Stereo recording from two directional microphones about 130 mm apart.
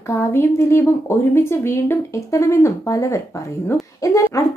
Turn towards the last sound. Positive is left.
turn(degrees=25)  # may be behind; listen again after turning